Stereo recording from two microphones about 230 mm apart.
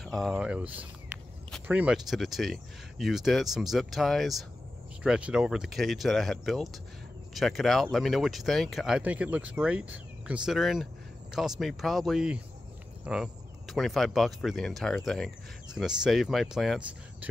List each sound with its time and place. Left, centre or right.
0.0 s speech: centre